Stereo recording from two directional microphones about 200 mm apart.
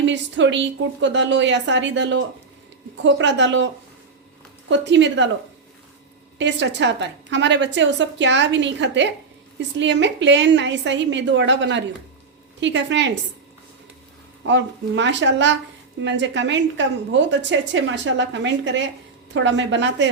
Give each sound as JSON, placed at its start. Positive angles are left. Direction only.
{"t": 0.0, "sound": "a woman's voice", "side_deg": -65}
{"t": 4.7, "sound": "a woman's voice", "side_deg": -65}
{"t": 6.4, "sound": "a woman's voice", "side_deg": -65}
{"t": 14.4, "sound": "a woman's voice", "side_deg": -65}